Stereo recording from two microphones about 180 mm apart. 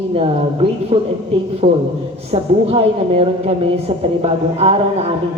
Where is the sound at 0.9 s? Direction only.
35° right (ahead or behind).